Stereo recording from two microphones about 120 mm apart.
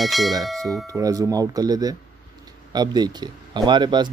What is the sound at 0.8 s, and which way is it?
Speech, 30° right (ahead or behind).